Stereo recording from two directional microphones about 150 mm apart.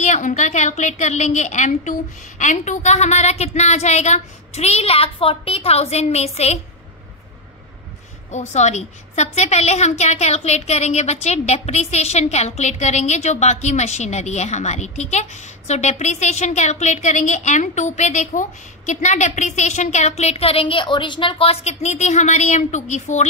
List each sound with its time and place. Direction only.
0.0 s a woman's voice: 55° left (ahead or behind)
8.3 s a woman's voice: 50° left (ahead or behind)